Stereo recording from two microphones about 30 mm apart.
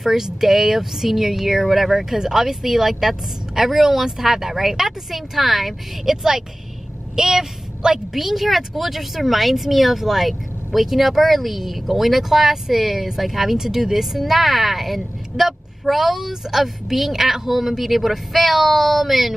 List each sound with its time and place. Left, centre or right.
0.0 s speech: centre
6.0 s a woman's voice: centre
8.2 s speech: centre